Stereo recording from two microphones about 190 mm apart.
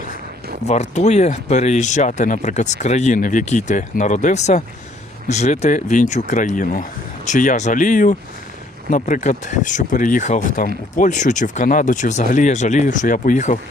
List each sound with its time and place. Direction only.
0.7 s speech: 35° left (ahead or behind)